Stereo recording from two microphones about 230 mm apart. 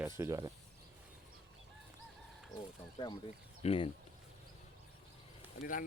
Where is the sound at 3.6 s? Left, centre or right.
Left.